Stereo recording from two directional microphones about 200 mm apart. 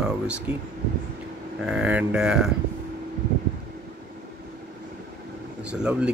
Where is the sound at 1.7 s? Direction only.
5° right (ahead or behind).